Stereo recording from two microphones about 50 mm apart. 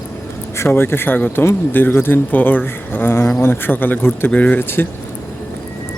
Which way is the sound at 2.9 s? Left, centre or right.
Left.